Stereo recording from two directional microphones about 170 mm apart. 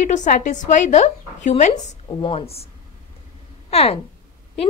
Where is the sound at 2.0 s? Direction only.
30° left (ahead or behind).